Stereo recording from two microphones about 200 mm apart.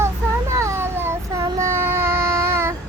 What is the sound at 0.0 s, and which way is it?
Child singing, 15° right (ahead or behind).